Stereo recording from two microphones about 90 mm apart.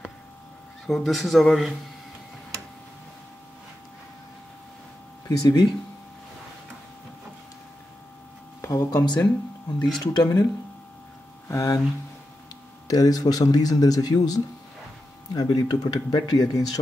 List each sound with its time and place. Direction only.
0.8 s speech: centre (ahead or behind)
5.4 s speech: 45° left (ahead or behind)
8.5 s a sound: 35° left (ahead or behind)
9.0 s speech: 50° left (ahead or behind)
11.4 s speech: 35° left (ahead or behind)
12.8 s speech: 45° left (ahead or behind)